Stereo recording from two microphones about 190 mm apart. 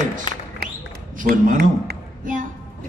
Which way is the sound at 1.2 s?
45° right (ahead or behind).